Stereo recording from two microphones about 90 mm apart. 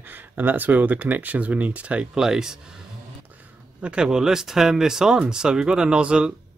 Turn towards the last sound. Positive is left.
turn(degrees=-10)  # may be behind; listen again after turning